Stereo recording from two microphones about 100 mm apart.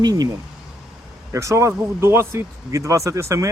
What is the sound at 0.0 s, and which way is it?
Speech, 40° right (ahead or behind).